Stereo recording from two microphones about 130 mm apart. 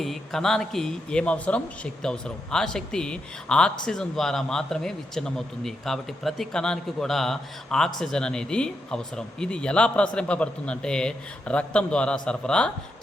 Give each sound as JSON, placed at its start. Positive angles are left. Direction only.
{"t": 0.0, "sound": "speech", "side_deg": 0}